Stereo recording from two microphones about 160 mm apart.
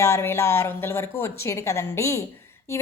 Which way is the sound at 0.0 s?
15° left (ahead or behind).